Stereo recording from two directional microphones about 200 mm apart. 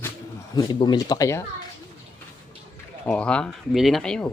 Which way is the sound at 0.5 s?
20° left (ahead or behind).